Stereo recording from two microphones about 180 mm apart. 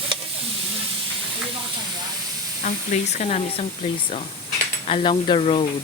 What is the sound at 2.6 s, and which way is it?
Speech, 40° left (ahead or behind).